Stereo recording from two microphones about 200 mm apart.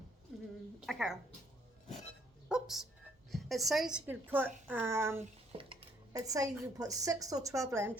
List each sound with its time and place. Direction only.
0.9 s speech: centre (ahead or behind)
2.5 s music: centre (ahead or behind)
3.3 s a woman's voice: centre (ahead or behind)
5.5 s dishes: 25° right (ahead or behind)
6.1 s a woman's voice: 15° right (ahead or behind)